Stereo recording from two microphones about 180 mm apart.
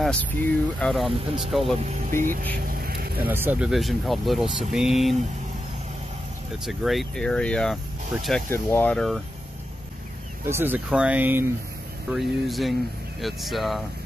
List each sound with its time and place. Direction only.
0.0 s speech: 5° left (ahead or behind)
1.9 s speech: 45° right (ahead or behind)
2.5 s a sound: 55° right (ahead or behind)
3.3 s speech: 10° right (ahead or behind)
6.6 s speech: centre (ahead or behind)
10.5 s speech: 10° right (ahead or behind)